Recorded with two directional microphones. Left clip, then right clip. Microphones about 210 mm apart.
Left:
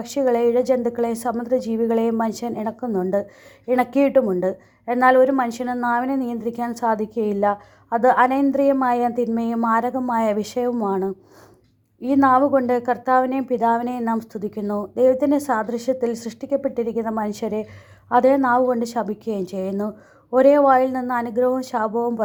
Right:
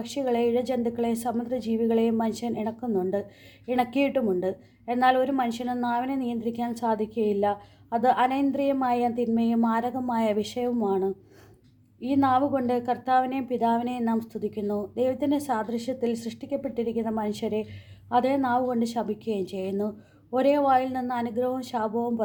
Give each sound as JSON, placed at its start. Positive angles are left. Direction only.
{"t": 0.0, "sound": "a woman's voice", "side_deg": 25}